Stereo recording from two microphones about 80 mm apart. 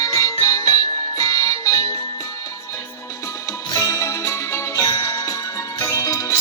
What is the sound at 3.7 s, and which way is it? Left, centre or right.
Music, left.